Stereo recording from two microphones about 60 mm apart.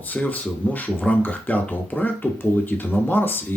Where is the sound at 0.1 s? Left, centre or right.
Left.